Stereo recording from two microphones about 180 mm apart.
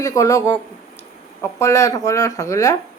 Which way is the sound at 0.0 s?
20° left (ahead or behind).